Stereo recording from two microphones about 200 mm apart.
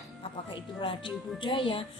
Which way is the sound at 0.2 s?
25° left (ahead or behind).